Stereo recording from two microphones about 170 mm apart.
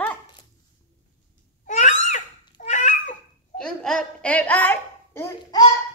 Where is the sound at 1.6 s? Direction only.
45° left (ahead or behind).